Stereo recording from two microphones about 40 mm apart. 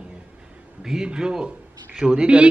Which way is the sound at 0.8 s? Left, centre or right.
Centre.